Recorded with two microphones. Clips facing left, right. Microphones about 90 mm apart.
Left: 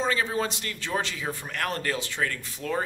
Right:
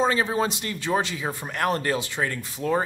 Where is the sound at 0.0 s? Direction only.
20° right (ahead or behind).